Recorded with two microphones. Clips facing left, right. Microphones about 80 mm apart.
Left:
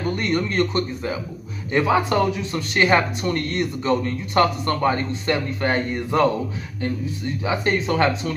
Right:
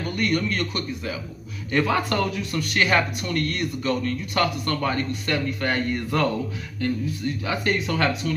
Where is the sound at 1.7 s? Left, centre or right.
Centre.